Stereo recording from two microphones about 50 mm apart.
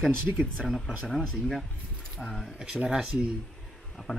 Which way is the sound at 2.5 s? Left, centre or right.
Centre.